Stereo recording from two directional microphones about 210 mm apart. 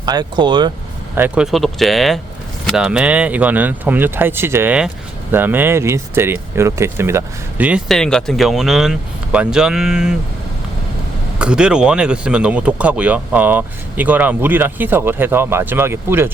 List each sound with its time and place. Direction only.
0.0 s speech: 20° right (ahead or behind)
1.1 s speech: 5° right (ahead or behind)
11.3 s speech: 5° right (ahead or behind)